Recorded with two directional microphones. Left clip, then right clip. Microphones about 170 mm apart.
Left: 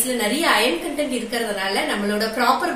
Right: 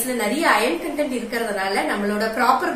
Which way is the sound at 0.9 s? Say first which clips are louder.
Even; 5° right (ahead or behind).